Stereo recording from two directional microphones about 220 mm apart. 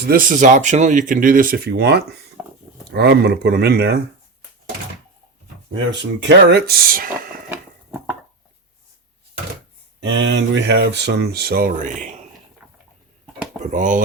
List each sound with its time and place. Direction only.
0.1 s speech: 40° right (ahead or behind)
6.2 s speech: 45° right (ahead or behind)
7.5 s a sound: 5° right (ahead or behind)
10.0 s speech: 50° right (ahead or behind)
12.6 s a sound: 5° right (ahead or behind)
13.6 s speech: 35° right (ahead or behind)